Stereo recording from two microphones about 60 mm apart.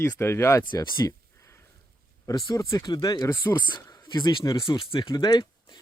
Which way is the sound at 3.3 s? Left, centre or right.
Left.